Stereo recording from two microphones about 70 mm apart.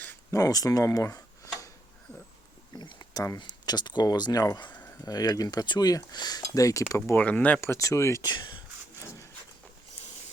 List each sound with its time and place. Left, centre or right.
0.3 s speech: left
2.7 s a sound: left
3.3 s speech: left
7.2 s speech: left
7.6 s speech: left
8.2 s speech: left